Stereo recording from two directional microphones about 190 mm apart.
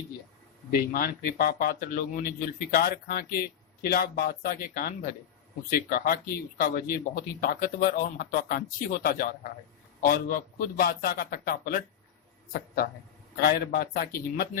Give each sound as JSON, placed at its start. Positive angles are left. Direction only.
{"t": 0.7, "sound": "a man's voice", "side_deg": 50}